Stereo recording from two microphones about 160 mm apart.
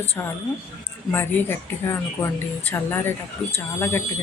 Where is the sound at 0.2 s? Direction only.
10° left (ahead or behind).